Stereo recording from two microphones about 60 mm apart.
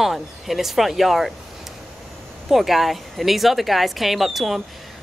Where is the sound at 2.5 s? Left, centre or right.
Centre.